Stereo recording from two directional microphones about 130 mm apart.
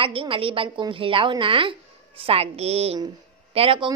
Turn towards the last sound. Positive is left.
turn(degrees=-40)  # may be behind; listen again after turning